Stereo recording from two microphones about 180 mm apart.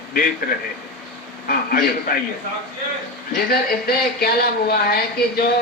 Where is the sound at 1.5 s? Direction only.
55° left (ahead or behind).